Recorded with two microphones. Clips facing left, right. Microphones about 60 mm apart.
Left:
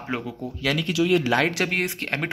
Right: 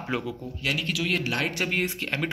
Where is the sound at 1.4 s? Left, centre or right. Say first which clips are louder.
Left 3 dB; left.